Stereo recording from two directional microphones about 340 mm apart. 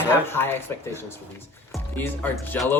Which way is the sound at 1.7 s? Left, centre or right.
Centre.